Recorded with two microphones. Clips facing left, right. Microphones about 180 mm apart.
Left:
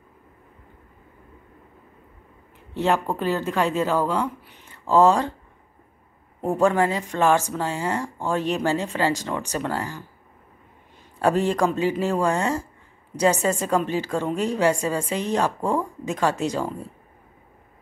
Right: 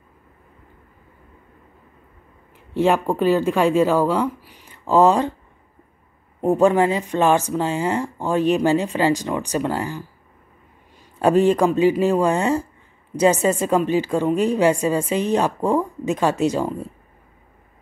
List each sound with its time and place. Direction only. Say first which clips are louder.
2.7 s speech: right 4 dB; 15° right (ahead or behind)
6.4 s speech: right 4 dB; 15° right (ahead or behind)
11.1 s speech: right 5 dB; 15° right (ahead or behind)